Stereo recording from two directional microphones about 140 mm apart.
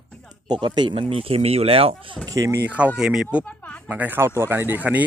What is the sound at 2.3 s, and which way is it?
Speech, 20° right (ahead or behind).